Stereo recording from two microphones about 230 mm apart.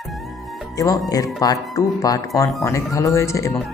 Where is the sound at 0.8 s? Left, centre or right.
Centre.